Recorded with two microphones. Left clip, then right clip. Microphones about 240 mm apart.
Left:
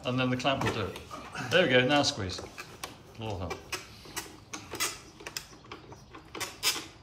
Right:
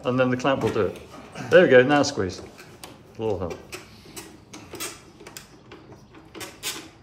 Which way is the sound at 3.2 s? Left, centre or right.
Right.